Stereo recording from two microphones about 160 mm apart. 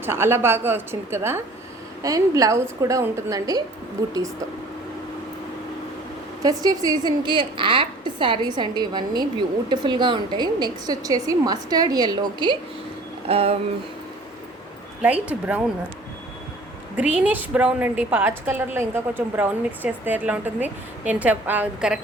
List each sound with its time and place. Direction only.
0.0 s a woman's voice: 15° right (ahead or behind)
6.4 s a woman's voice: 25° right (ahead or behind)
13.2 s a sound: 35° right (ahead or behind)
15.0 s a woman's voice: 10° right (ahead or behind)
17.0 s a woman's voice: 10° right (ahead or behind)